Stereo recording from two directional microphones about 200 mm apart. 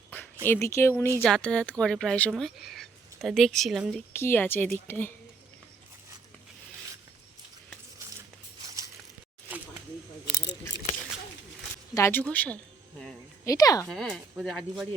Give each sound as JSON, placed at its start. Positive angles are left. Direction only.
{"t": 0.4, "sound": "a woman's voice", "side_deg": 10}
{"t": 4.1, "sound": "a woman's voice", "side_deg": 10}
{"t": 11.9, "sound": "a woman's voice", "side_deg": 10}
{"t": 13.4, "sound": "speech", "side_deg": 15}
{"t": 13.8, "sound": "speech", "side_deg": 5}